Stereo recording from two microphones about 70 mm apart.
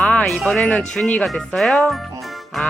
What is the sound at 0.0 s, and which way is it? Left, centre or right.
Music, centre.